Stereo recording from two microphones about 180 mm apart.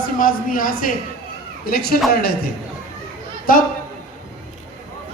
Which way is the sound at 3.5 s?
50° left (ahead or behind).